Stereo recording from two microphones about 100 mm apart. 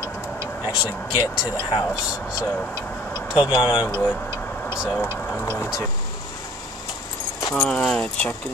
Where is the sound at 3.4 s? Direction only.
55° left (ahead or behind).